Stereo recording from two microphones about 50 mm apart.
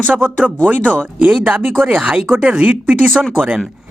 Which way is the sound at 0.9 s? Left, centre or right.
Right.